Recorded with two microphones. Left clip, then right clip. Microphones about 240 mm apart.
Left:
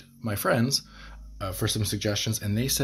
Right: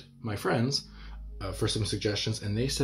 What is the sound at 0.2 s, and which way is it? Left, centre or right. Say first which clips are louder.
Speech: left 4 dB; left.